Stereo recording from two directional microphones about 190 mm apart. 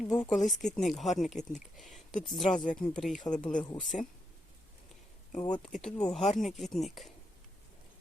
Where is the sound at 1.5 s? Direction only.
Centre (ahead or behind).